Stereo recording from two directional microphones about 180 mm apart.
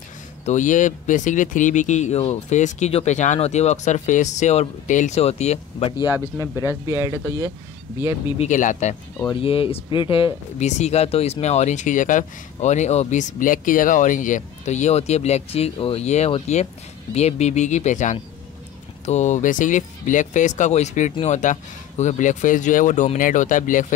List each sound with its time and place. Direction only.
0.5 s speech: 45° left (ahead or behind); by 6.7 s 20° left (ahead or behind)
6.7 s speech: 15° right (ahead or behind)
8.3 s speech: 40° left (ahead or behind)
9.3 s speech: 30° left (ahead or behind)